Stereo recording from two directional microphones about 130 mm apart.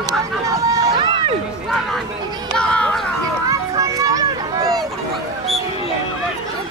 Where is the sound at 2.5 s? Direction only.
10° left (ahead or behind).